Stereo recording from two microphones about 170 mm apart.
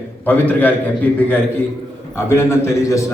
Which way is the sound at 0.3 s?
10° left (ahead or behind).